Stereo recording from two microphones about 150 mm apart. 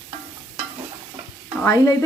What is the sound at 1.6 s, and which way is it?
Speech, 20° left (ahead or behind).